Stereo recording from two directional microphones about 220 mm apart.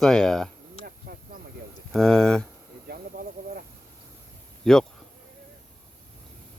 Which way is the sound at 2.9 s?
45° right (ahead or behind).